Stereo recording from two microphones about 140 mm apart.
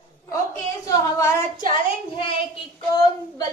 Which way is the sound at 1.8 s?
40° left (ahead or behind).